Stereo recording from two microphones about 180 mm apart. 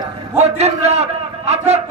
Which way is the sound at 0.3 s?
35° right (ahead or behind).